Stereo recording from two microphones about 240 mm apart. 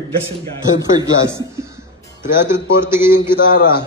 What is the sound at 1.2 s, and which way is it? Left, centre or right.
A man's voice, centre.